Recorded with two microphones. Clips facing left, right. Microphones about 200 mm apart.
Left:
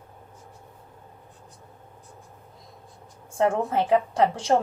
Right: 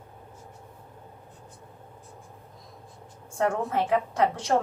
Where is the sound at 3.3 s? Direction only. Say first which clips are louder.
Left 3 dB; 30° left (ahead or behind).